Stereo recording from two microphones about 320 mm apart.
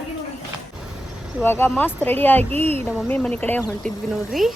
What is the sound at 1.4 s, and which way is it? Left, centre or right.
A woman's voice, centre.